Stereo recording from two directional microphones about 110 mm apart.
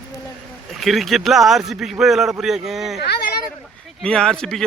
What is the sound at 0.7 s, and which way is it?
Speech, centre (ahead or behind).